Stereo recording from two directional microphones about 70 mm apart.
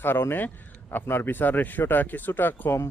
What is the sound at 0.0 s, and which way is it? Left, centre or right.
Speech, left.